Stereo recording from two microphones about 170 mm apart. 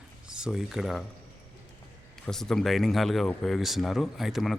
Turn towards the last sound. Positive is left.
turn(degrees=0)  # may be behind; listen again after turning